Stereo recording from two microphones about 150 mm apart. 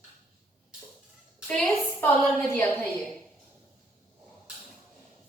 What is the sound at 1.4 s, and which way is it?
Speech, 5° left (ahead or behind).